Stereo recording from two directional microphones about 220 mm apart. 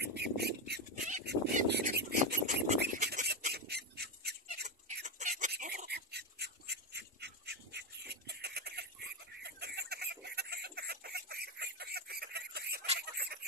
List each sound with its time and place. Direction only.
0.0 s bird: 50° right (ahead or behind)
1.2 s a sound: 50° right (ahead or behind)
2.3 s a sound: 35° right (ahead or behind)
2.8 s bird: 40° right (ahead or behind)
4.6 s chicken: 35° right (ahead or behind)
5.5 s duck: 40° right (ahead or behind)
9.4 s chicken: 45° right (ahead or behind)
13.0 s fowl: 45° right (ahead or behind)